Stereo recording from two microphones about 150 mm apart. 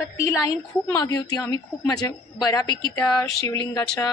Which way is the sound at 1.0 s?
25° left (ahead or behind).